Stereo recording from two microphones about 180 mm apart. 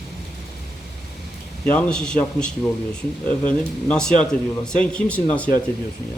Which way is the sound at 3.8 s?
5° left (ahead or behind).